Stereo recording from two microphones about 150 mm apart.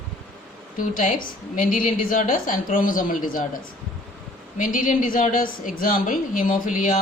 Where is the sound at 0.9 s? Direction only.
65° left (ahead or behind).